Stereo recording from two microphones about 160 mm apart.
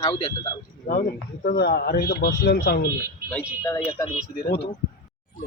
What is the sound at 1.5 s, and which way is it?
Speech, 80° left.